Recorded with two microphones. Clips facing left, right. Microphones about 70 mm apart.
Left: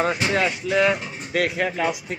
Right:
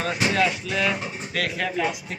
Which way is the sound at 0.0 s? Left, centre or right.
Left.